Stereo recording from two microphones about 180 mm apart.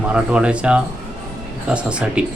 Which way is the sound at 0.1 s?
5° right (ahead or behind).